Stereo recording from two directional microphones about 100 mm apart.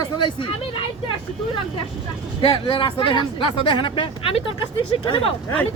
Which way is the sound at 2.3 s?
55° left (ahead or behind).